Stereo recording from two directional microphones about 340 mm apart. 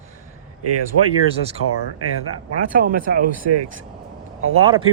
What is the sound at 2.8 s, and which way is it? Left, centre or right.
Speech, right.